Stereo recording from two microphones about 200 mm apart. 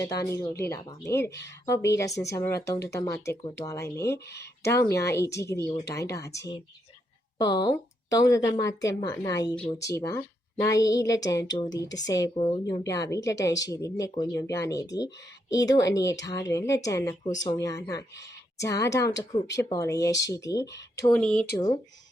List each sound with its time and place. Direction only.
0.0 s speech: 15° left (ahead or behind)
21.1 s speech: 5° left (ahead or behind)